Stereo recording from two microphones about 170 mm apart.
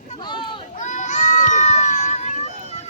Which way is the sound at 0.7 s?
45° left (ahead or behind).